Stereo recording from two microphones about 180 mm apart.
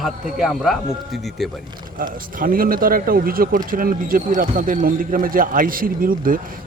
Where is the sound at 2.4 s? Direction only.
50° right (ahead or behind).